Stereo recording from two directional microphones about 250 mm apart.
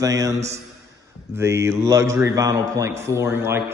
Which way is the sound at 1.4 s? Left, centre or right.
Centre.